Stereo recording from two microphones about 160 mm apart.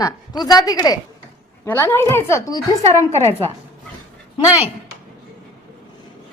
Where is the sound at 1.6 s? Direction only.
10° left (ahead or behind).